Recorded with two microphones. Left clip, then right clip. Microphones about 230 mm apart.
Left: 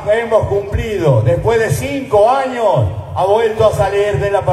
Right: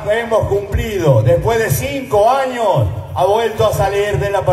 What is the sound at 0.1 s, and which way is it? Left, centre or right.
A man's voice, right.